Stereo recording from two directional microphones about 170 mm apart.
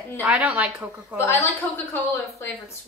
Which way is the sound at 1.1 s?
15° left (ahead or behind).